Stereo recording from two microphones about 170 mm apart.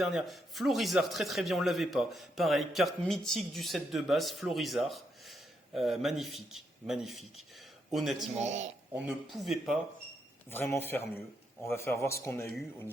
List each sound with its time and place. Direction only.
0.0 s speech: centre (ahead or behind)
8.4 s a man's voice: 40° right (ahead or behind)
9.3 s speech: centre (ahead or behind)
10.5 s speech: 10° left (ahead or behind)